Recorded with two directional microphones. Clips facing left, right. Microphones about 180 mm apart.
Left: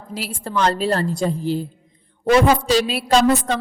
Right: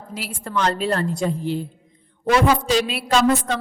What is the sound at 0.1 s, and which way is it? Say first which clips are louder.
A woman's voice: left 2 dB; 35° left (ahead or behind).